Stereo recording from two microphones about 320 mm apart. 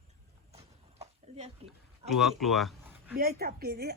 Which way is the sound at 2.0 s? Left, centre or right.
Centre.